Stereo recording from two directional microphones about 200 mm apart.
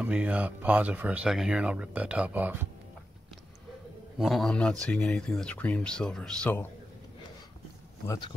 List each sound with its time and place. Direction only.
0.0 s speech: 5° right (ahead or behind)
4.2 s speech: centre (ahead or behind)
8.1 s speech: 20° left (ahead or behind)